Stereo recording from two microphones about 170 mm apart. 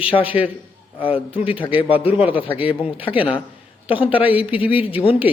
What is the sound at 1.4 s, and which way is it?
Speech, 30° left (ahead or behind).